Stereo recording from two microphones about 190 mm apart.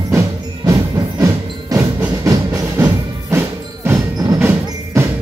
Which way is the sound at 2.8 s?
10° right (ahead or behind).